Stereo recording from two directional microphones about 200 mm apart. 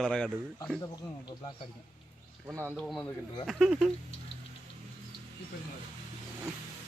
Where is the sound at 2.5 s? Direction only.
10° right (ahead or behind).